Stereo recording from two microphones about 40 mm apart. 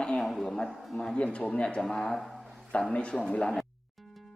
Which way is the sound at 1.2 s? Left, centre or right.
Left.